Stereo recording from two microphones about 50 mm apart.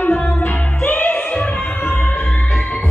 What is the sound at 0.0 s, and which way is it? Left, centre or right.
Music, left.